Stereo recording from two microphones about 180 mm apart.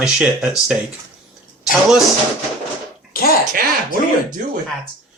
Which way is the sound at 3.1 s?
55° left (ahead or behind).